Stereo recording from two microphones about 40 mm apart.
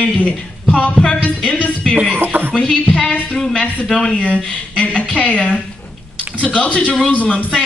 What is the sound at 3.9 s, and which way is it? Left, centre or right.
Speech, left.